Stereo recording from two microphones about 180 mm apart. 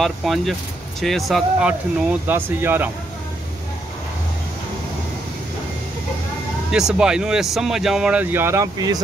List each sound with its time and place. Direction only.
0.0 s speech: centre (ahead or behind)
6.7 s speech: 5° right (ahead or behind); by 9.0 s 20° right (ahead or behind)